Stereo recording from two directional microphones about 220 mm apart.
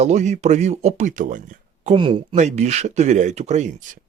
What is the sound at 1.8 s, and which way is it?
Speech, 25° right (ahead or behind).